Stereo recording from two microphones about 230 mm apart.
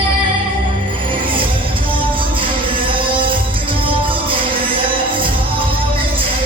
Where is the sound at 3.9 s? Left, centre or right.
Right.